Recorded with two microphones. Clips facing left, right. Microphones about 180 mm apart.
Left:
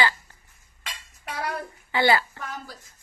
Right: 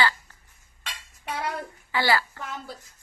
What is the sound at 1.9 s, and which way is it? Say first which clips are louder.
Speech: left 3 dB; 20° left (ahead or behind).